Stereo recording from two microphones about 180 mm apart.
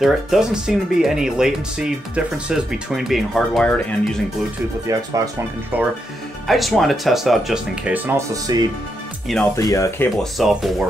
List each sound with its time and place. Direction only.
0.0 s speech: 5° right (ahead or behind)
4.8 s speech: 20° right (ahead or behind)
6.4 s speech: centre (ahead or behind)
8.5 s speech: 20° right (ahead or behind)
9.6 s speech: 15° left (ahead or behind)
10.1 s speech: centre (ahead or behind)